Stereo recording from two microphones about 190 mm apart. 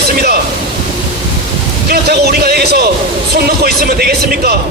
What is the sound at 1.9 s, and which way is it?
Speech, 55° right (ahead or behind).